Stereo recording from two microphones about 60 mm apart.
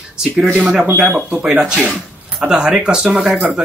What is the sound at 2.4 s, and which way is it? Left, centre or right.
Speech, centre.